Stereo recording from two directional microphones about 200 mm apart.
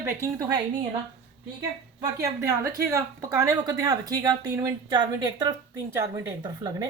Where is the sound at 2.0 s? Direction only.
15° right (ahead or behind).